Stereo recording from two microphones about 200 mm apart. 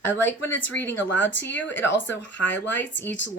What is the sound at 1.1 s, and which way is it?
Speech, 65° left (ahead or behind).